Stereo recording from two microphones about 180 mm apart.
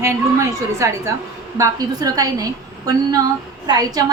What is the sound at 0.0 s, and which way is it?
A woman's voice, 15° right (ahead or behind).